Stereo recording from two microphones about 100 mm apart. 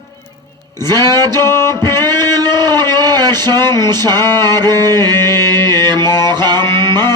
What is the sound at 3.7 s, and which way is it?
Music, 45° right (ahead or behind).